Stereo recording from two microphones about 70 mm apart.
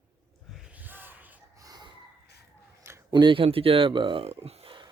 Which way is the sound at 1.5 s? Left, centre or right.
Right.